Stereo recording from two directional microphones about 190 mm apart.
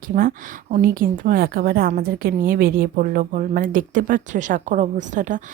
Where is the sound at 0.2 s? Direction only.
50° right (ahead or behind).